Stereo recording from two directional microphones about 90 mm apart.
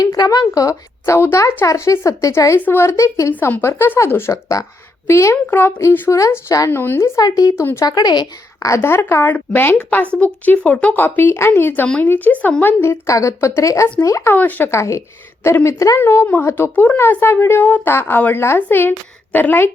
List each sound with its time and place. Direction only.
0.0 s a woman's voice: 45° left (ahead or behind)
2.6 s a woman's voice: 25° left (ahead or behind)
6.1 s a woman's voice: 35° left (ahead or behind)
6.7 s speech: 25° left (ahead or behind)
7.2 s a woman's voice: 40° left (ahead or behind)
7.6 s speech: 25° left (ahead or behind)
7.9 s speech: 50° left (ahead or behind)
8.5 s speech: 35° left (ahead or behind); by 12.7 s 20° left (ahead or behind)
12.8 s a woman's voice: 30° left (ahead or behind)
14.3 s speech: 20° left (ahead or behind)
14.7 s a woman's voice: 35° left (ahead or behind)